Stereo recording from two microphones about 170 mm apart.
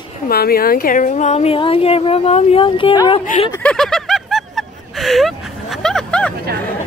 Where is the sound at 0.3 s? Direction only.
65° left (ahead or behind); by 3.2 s 30° left (ahead or behind).